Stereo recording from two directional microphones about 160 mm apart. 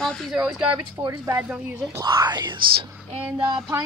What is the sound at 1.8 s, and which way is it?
Speech, 25° right (ahead or behind).